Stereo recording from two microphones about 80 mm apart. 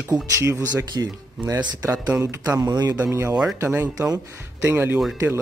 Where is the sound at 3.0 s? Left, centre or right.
Right.